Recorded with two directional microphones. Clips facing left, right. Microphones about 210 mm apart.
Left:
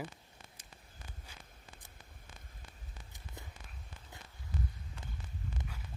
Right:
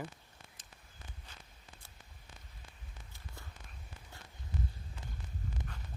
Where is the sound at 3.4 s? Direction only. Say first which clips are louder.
Left 3 dB; 20° left (ahead or behind).